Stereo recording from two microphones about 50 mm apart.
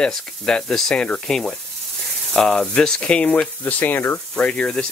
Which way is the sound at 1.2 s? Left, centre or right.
Centre.